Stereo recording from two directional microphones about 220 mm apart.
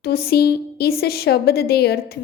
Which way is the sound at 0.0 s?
45° left (ahead or behind).